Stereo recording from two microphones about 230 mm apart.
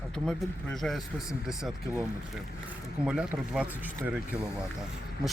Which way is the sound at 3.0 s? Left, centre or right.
Centre.